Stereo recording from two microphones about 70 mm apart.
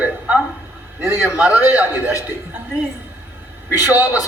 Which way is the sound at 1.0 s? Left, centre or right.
Right.